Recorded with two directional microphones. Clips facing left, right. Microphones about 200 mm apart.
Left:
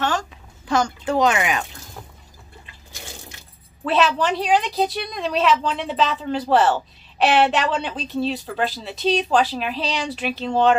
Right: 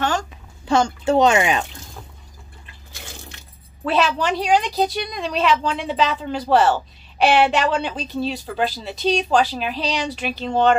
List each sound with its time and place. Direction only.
0.0 s a sound: centre (ahead or behind)
0.7 s speech: 25° right (ahead or behind)
3.8 s a woman's voice: centre (ahead or behind)